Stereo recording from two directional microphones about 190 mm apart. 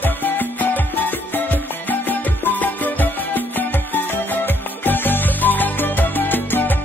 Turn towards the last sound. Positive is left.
turn(degrees=10)  # may be behind; listen again after turning